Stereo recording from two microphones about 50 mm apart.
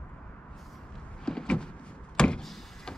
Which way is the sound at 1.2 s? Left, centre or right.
Centre.